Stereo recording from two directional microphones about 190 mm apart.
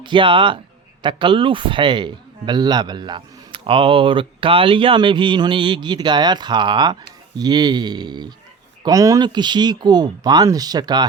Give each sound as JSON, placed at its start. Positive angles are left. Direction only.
{"t": 0.0, "sound": "speech", "side_deg": -25}